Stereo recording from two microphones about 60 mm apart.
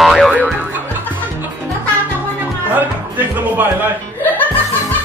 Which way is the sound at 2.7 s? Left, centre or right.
Right.